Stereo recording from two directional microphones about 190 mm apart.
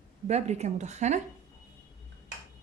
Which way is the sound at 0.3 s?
35° right (ahead or behind).